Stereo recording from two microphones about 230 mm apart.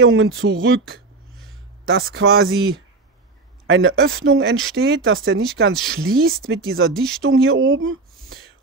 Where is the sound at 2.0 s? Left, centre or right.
Right.